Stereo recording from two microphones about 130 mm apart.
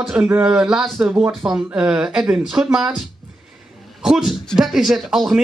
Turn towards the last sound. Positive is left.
turn(degrees=0)  # may be behind; listen again after turning